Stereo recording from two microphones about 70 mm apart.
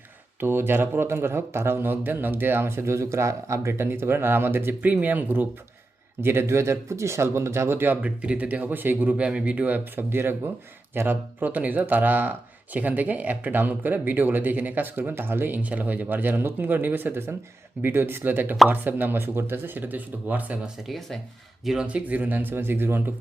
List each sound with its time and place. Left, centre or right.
0.3 s a man's voice: right
6.2 s a man's voice: right
8.0 s speech: centre
20.8 s speech: centre
21.8 s speech: right